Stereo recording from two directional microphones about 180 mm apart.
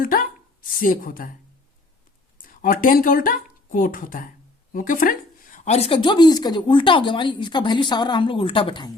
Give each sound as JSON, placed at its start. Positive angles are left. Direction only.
{"t": 0.0, "sound": "a sound", "side_deg": 50}
{"t": 0.8, "sound": "speech", "side_deg": 50}
{"t": 2.4, "sound": "speech", "side_deg": 50}